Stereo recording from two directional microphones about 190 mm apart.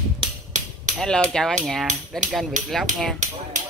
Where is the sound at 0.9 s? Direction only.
5° left (ahead or behind).